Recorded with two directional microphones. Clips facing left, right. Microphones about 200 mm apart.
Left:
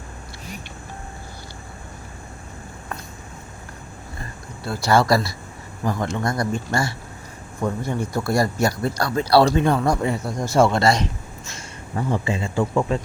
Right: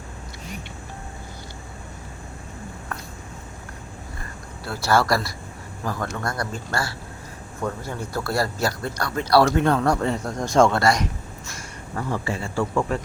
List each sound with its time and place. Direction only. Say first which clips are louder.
4.6 s speech: left 2 dB; 15° left (ahead or behind)
9.0 s speech: left 2 dB; 35° left (ahead or behind)
9.4 s speech: left 1 dB; 15° left (ahead or behind)
10.8 s speech: left 2 dB; 25° left (ahead or behind)